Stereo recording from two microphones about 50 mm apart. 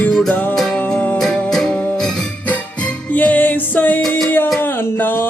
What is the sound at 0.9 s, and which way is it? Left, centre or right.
Music, left.